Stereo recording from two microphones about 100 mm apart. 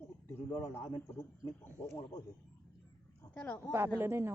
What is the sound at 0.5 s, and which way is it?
Speech, 60° left (ahead or behind).